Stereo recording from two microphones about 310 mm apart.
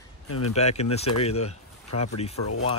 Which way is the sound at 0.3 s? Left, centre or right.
Left.